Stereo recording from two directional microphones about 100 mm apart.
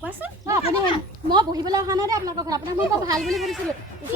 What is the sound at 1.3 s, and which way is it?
A woman's voice, 40° right (ahead or behind).